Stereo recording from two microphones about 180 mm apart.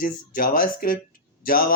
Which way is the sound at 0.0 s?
50° left (ahead or behind).